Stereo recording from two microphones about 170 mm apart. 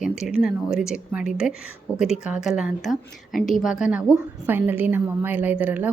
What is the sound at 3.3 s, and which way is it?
Speech, 50° left (ahead or behind).